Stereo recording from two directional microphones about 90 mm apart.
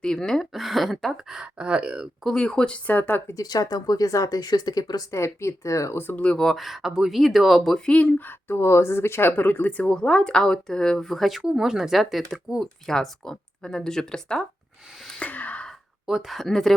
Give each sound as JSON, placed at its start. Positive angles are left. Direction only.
{"t": 0.0, "sound": "speech", "side_deg": 5}
{"t": 2.2, "sound": "speech", "side_deg": 10}
{"t": 3.3, "sound": "speech", "side_deg": 45}
{"t": 5.1, "sound": "speech", "side_deg": 30}
{"t": 7.9, "sound": "speech", "side_deg": 15}
{"t": 15.2, "sound": "gasp", "side_deg": 15}
{"t": 16.0, "sound": "speech", "side_deg": -5}